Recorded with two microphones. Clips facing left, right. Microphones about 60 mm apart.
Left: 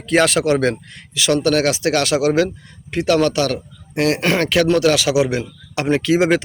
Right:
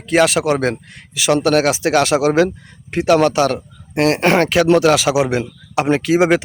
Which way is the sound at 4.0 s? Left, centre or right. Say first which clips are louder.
Right 3 dB; right.